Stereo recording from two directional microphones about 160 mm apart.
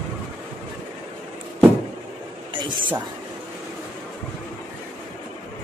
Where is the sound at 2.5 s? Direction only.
30° right (ahead or behind).